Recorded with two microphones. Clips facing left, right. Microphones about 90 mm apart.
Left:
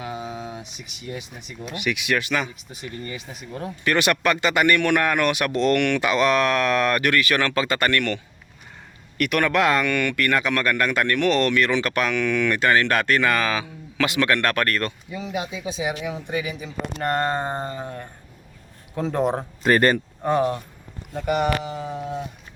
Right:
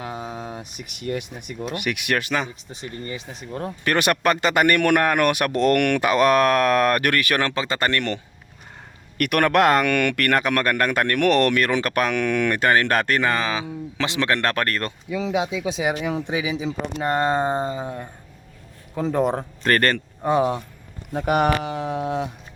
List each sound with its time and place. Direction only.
0.0 s a sound: 35° right (ahead or behind); by 1.3 s 60° right (ahead or behind)
1.7 s speech: 50° right (ahead or behind)
7.4 s speech: 25° right (ahead or behind)
9.1 s speech: 55° right (ahead or behind); by 14.9 s 30° right (ahead or behind)
15.1 s speech: 90° right
17.0 s speech: 10° right (ahead or behind)
19.7 s speech: 10° left (ahead or behind)
20.2 s speech: 10° right (ahead or behind)
21.1 s speech: 70° right (ahead or behind)